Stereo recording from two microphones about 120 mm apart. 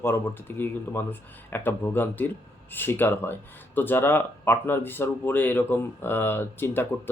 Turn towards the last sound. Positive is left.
turn(degrees=20)  # may be behind; listen again after turning